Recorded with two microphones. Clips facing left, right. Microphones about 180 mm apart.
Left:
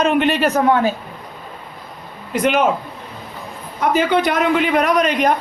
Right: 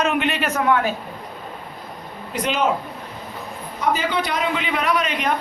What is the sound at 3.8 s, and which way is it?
Speech, 55° left (ahead or behind).